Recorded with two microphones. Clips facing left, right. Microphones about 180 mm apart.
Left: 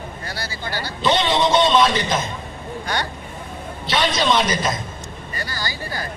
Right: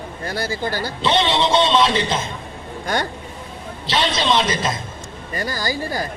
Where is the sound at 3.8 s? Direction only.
25° right (ahead or behind).